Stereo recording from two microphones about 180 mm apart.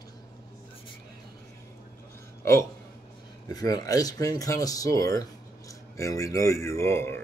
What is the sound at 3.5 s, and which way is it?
Speech, 20° left (ahead or behind).